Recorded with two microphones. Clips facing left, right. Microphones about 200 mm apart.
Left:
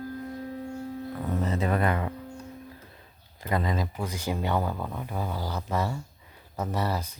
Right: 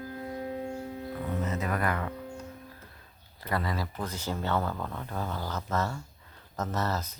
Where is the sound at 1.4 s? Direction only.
30° left (ahead or behind).